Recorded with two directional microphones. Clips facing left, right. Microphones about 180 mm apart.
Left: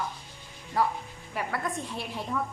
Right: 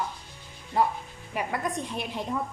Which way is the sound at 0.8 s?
25° right (ahead or behind).